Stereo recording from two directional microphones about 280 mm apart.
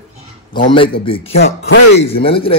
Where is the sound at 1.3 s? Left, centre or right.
Left.